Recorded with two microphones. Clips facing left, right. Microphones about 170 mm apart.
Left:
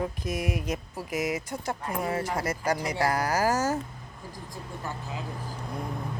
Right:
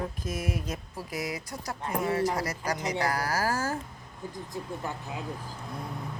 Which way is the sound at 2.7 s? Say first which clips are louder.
Even; 20° right (ahead or behind).